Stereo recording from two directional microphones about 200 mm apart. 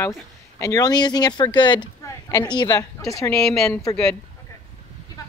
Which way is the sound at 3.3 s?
5° left (ahead or behind).